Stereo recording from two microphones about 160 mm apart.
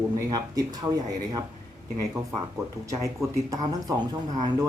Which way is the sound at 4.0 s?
25° right (ahead or behind).